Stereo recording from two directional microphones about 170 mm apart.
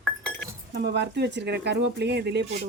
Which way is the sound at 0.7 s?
85° right.